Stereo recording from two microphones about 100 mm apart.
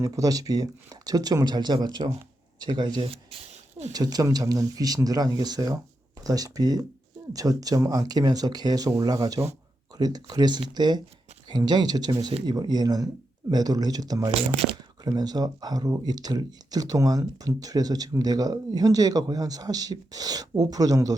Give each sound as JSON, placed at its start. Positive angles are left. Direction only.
{"t": 0.0, "sound": "speech", "side_deg": -35}